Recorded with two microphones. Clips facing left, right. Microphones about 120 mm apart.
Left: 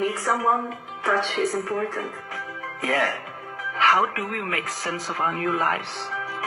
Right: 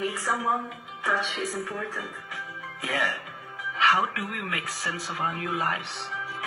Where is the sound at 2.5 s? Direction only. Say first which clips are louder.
Left 5 dB; 70° left (ahead or behind).